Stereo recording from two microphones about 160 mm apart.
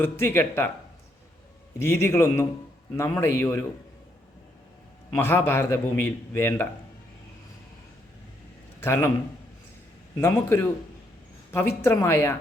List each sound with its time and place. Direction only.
0.0 s a man's voice: 15° left (ahead or behind)
1.8 s a man's voice: 15° left (ahead or behind)
5.1 s a man's voice: 15° left (ahead or behind)
8.8 s a man's voice: 15° left (ahead or behind)
10.2 s a man's voice: 15° left (ahead or behind)
11.8 s a man's voice: 15° left (ahead or behind)